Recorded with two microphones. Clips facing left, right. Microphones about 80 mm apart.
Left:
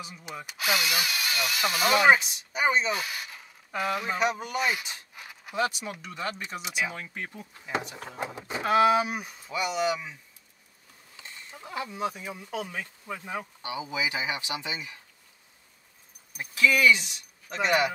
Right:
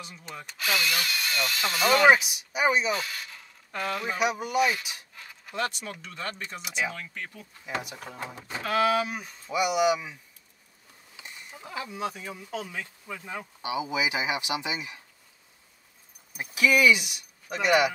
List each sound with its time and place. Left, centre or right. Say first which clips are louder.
0.0 s speech: left 2 dB; centre
2.0 s speech: right 1 dB; centre
2.9 s speech: right 1 dB; centre
4.2 s speech: right 6 dB; centre
5.1 s speech: left 3 dB; centre
9.5 s speech: right 4 dB; centre
11.5 s speech: left 1 dB; centre
13.6 s speech: right 6 dB; centre
16.3 s speech: right 1 dB; centre